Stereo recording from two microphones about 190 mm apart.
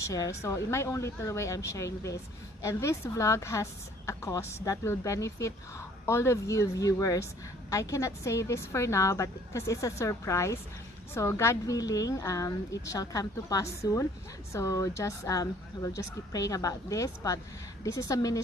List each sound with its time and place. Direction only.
0.1 s a woman's voice: 15° left (ahead or behind)